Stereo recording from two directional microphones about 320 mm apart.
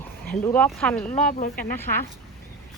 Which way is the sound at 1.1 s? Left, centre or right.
Left.